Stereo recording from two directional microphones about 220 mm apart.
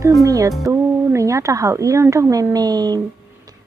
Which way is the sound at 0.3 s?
15° right (ahead or behind).